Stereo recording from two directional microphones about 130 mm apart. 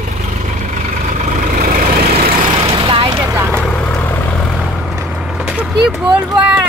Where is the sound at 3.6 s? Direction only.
10° left (ahead or behind).